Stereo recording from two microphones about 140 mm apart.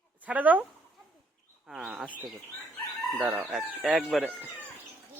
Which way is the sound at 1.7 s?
5° right (ahead or behind).